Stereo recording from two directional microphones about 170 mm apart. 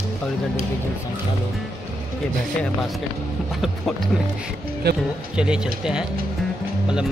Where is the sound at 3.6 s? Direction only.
Centre (ahead or behind).